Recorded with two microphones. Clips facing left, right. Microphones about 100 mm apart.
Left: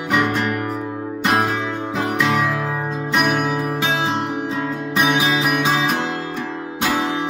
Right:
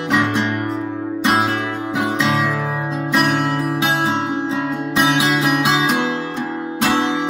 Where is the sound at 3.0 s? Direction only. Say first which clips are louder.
Right 2 dB; centre (ahead or behind).